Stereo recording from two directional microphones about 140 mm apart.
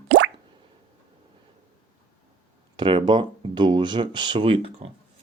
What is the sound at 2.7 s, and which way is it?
Speech, 35° right (ahead or behind).